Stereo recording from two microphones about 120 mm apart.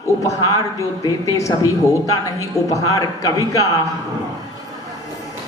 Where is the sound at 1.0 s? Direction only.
25° left (ahead or behind).